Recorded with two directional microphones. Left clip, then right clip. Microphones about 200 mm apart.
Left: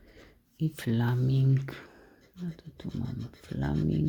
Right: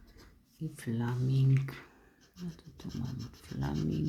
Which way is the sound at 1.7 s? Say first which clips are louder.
Left 4 dB; 25° left (ahead or behind).